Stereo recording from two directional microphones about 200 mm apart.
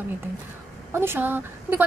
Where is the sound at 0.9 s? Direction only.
10° right (ahead or behind).